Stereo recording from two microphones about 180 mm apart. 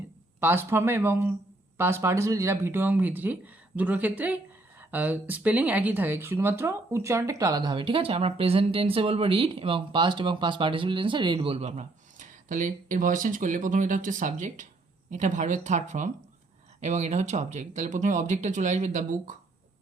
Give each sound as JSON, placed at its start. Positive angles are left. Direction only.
{"t": 0.3, "sound": "speech", "side_deg": -10}